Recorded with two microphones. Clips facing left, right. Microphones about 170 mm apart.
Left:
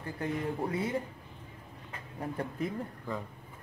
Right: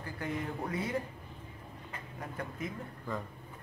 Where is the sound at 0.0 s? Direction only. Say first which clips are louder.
Left 3 dB; 30° left (ahead or behind).